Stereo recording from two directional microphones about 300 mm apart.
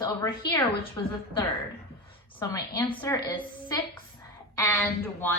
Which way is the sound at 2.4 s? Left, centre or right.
Centre.